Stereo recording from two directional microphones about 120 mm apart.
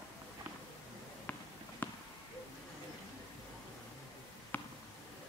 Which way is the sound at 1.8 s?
15° left (ahead or behind).